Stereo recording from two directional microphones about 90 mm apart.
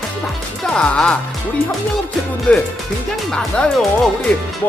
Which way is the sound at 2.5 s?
15° left (ahead or behind).